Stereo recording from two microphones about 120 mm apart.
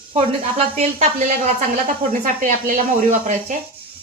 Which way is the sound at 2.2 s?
90° right.